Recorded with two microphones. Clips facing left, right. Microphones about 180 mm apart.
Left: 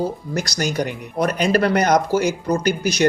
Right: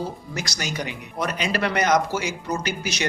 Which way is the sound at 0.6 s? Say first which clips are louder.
Left 7 dB; 55° left (ahead or behind).